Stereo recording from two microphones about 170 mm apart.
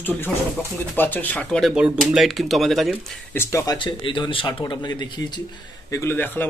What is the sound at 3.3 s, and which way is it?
Speech, 15° left (ahead or behind).